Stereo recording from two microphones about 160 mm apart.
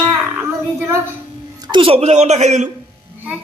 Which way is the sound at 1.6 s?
30° right (ahead or behind).